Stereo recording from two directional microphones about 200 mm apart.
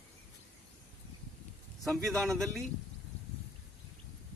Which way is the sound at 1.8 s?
Centre (ahead or behind).